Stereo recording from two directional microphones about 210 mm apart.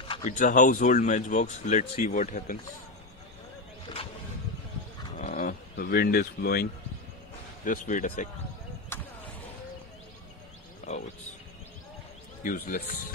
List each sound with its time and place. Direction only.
0.1 s speech: 35° left (ahead or behind)
5.2 s speech: 35° left (ahead or behind)
8.9 s basketball bounce: 10° left (ahead or behind)
12.4 s speech: 40° left (ahead or behind)